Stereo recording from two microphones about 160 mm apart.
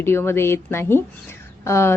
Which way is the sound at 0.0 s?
15° left (ahead or behind).